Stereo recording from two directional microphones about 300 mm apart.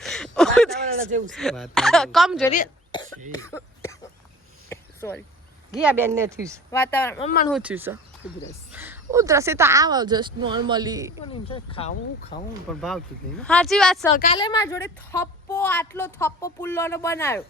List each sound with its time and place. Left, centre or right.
0.0 s a sound: centre
1.3 s speech: centre
2.5 s cough: centre
3.3 s speech: centre
4.7 s a sound: centre
5.7 s a woman's voice: centre
6.7 s speech: centre
7.2 s speech: left
7.5 s a woman's voice: centre
11.3 s speech: centre
12.7 s speech: centre
14.3 s speech: centre